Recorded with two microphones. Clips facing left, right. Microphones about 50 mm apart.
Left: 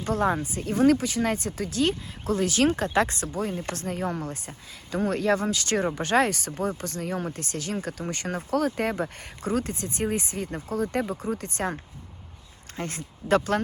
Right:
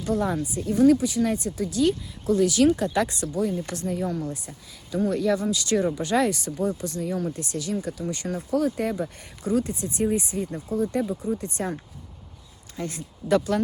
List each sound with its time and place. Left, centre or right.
0.0 s speech: left
11.0 s speech: left
11.3 s speech: left